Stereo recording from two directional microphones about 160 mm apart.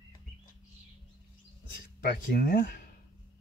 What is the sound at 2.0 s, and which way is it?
Speech, 75° left (ahead or behind).